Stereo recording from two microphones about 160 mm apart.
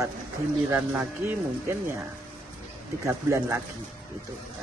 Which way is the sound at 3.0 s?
15° right (ahead or behind).